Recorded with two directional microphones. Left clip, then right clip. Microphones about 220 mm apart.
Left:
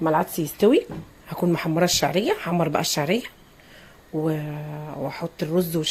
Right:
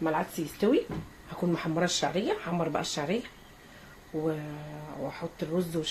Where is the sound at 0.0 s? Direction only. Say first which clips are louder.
Left 8 dB; 40° left (ahead or behind).